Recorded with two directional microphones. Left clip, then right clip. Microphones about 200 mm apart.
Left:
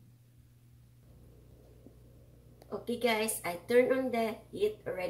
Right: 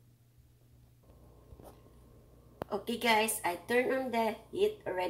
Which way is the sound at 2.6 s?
20° right (ahead or behind).